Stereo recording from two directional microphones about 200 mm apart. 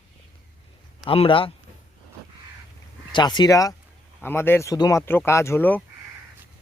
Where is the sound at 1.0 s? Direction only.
30° left (ahead or behind).